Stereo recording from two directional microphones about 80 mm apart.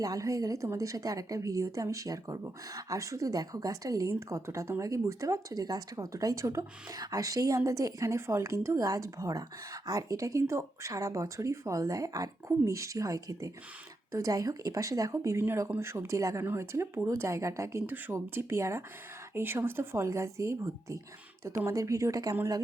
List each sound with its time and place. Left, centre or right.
0.0 s a woman's voice: right
21.7 s a woman's voice: right